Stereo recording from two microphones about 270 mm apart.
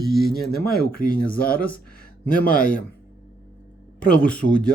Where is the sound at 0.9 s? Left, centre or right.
Left.